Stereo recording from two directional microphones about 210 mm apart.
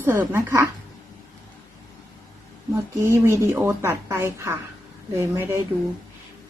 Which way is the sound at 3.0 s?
10° right (ahead or behind).